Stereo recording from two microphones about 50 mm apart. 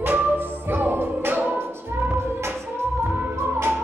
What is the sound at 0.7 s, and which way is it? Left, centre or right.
Music, right.